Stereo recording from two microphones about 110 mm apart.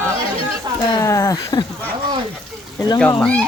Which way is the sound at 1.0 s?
30° left (ahead or behind).